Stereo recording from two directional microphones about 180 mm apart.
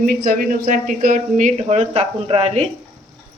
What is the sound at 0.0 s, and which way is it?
Speech, 50° right (ahead or behind).